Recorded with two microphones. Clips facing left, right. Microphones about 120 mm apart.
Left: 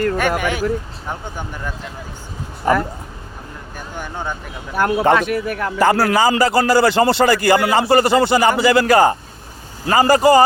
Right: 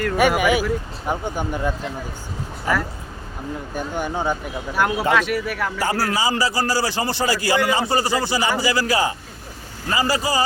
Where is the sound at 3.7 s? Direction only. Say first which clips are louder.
Right 4 dB; 15° right (ahead or behind).